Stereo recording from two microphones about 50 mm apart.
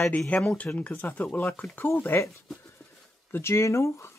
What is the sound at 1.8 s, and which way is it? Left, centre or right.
Speech, left.